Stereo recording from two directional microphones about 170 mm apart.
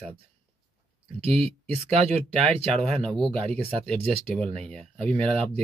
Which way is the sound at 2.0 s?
35° right (ahead or behind).